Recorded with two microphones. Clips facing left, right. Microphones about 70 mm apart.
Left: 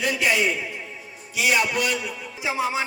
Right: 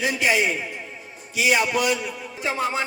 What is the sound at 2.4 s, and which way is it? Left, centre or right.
Speech, centre.